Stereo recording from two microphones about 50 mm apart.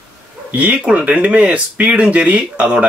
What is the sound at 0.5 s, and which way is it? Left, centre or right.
Speech, right.